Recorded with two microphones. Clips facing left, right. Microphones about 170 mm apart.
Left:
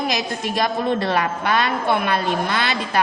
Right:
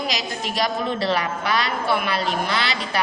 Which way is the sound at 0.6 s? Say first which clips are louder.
Left 3 dB; 55° left (ahead or behind).